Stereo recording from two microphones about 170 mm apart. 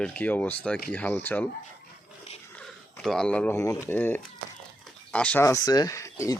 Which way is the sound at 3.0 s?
5° left (ahead or behind).